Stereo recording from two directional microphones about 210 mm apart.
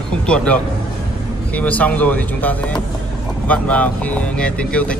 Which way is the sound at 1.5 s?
5° left (ahead or behind).